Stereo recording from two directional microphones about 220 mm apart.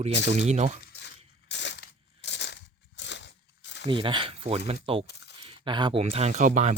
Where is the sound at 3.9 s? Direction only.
20° right (ahead or behind).